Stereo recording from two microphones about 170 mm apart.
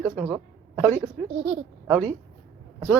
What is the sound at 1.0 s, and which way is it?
A woman's voice, centre (ahead or behind).